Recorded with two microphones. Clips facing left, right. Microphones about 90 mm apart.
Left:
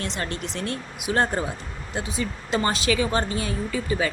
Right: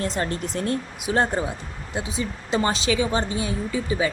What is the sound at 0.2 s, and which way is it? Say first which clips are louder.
Speech: right 4 dB; 40° right (ahead or behind).